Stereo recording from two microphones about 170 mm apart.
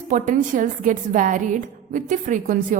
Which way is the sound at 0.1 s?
50° right (ahead or behind).